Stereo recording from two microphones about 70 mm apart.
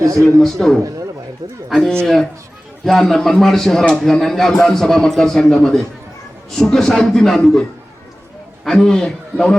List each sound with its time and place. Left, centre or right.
0.0 s a man's voice: right
0.3 s a man's voice: centre
2.0 s a man's voice: centre
8.6 s a man's voice: centre